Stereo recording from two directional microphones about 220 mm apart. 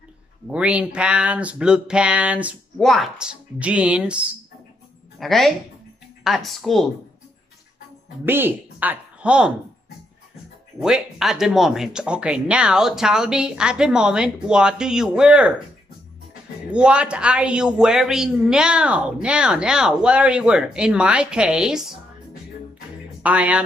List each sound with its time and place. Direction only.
0.5 s a man's voice: 5° right (ahead or behind)
8.3 s speech: 10° right (ahead or behind)
10.8 s a man's voice: centre (ahead or behind)
16.7 s a man's voice: 5° right (ahead or behind)
23.2 s a man's voice: 5° right (ahead or behind)